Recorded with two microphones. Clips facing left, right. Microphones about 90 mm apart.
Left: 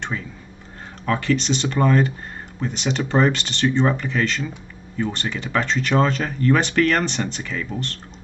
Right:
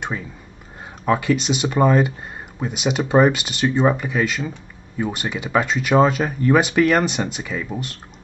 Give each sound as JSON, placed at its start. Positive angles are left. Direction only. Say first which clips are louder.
{"t": 1.0, "sound": "speech", "louder": "right 2 dB", "side_deg": -10}